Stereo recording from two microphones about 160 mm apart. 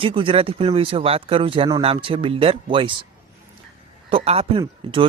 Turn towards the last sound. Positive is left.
turn(degrees=-35)  # may be behind; listen again after turning